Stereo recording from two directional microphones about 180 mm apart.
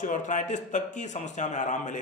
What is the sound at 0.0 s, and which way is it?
A man's voice, 45° left (ahead or behind).